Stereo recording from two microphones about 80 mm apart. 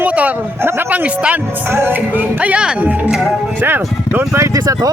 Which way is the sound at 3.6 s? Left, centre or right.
Right.